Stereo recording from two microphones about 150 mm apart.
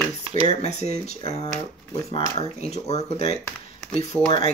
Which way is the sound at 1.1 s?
45° left (ahead or behind).